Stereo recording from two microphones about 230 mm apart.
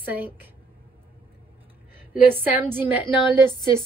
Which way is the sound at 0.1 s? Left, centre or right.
Centre.